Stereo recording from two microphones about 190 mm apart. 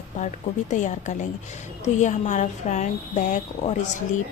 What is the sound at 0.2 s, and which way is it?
Speech, 40° left (ahead or behind).